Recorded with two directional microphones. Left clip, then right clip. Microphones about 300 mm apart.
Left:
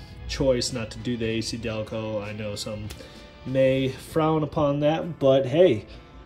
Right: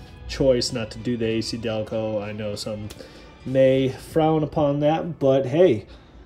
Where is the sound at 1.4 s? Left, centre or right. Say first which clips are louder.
Right 4 dB; centre.